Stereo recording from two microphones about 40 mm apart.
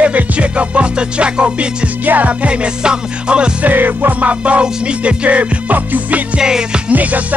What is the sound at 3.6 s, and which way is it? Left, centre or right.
Music, right.